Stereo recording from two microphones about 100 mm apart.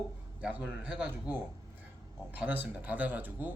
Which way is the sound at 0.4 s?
15° right (ahead or behind).